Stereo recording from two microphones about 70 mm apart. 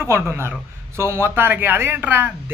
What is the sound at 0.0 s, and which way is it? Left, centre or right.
Speech, right.